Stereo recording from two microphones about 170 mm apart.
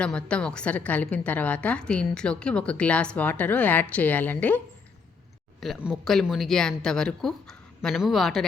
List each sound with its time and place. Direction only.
0.0 s a woman's voice: 5° left (ahead or behind)
5.5 s speech: centre (ahead or behind)